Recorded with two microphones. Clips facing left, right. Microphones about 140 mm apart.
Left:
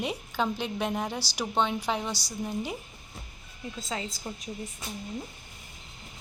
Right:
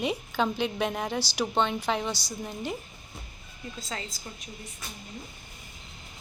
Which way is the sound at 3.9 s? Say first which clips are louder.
Left 3 dB; 15° left (ahead or behind).